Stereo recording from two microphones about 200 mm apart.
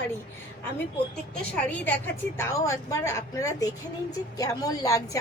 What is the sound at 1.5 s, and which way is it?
A woman's voice, 10° left (ahead or behind).